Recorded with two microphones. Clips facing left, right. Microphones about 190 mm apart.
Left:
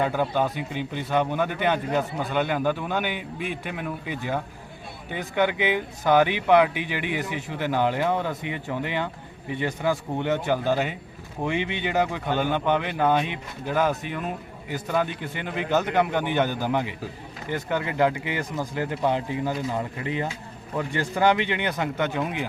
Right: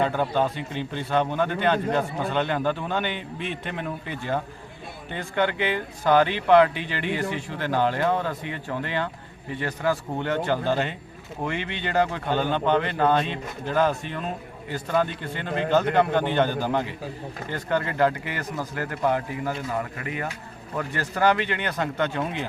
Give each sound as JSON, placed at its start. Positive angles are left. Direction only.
{"t": 0.0, "sound": "a man's voice", "side_deg": 10}